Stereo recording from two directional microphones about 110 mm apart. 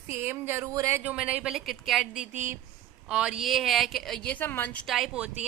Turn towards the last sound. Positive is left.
turn(degrees=-5)  # may be behind; listen again after turning